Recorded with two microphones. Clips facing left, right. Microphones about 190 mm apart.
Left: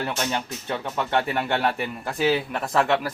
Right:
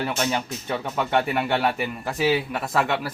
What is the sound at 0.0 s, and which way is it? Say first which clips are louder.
Speech: right 2 dB; 5° right (ahead or behind).